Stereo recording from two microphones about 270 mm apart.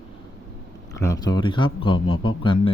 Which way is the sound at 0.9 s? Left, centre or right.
Centre.